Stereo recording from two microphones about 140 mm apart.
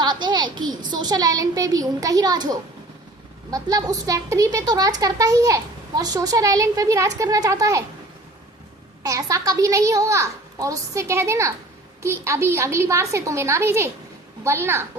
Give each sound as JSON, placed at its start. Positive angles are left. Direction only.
{"t": 0.0, "sound": "speech", "side_deg": -30}
{"t": 9.0, "sound": "a woman's voice", "side_deg": -25}